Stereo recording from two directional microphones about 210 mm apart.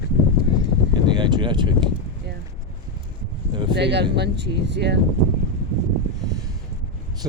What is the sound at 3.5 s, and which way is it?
Speech, 20° right (ahead or behind).